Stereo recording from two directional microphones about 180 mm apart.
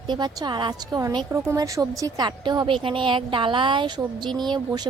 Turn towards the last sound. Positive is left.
turn(degrees=-25)  # may be behind; listen again after turning